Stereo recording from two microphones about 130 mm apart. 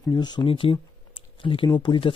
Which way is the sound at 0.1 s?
35° left (ahead or behind).